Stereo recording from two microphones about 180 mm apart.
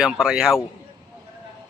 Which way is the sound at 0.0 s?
5° right (ahead or behind).